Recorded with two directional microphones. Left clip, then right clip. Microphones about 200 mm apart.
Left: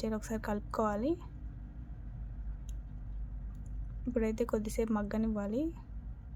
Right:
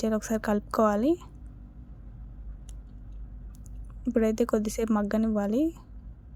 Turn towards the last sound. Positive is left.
turn(degrees=-35)  # may be behind; listen again after turning